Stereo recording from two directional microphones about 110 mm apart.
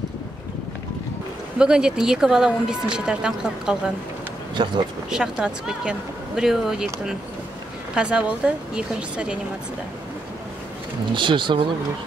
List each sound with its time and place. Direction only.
1.6 s speech: 5° right (ahead or behind)
4.6 s speech: 45° right (ahead or behind)
5.1 s speech: 5° right (ahead or behind)
11.1 s speech: 45° right (ahead or behind)